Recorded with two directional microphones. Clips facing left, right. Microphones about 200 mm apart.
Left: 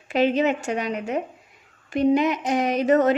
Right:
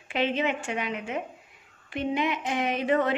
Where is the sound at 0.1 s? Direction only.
40° left (ahead or behind).